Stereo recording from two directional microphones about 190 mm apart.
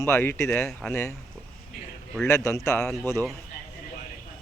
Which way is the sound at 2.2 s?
15° left (ahead or behind).